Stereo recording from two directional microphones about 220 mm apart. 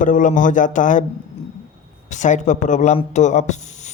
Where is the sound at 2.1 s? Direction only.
35° left (ahead or behind).